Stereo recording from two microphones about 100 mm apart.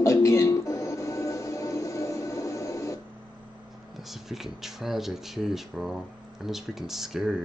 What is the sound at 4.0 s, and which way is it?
Speech, 5° right (ahead or behind).